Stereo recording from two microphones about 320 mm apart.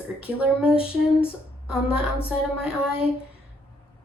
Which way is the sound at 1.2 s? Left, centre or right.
Centre.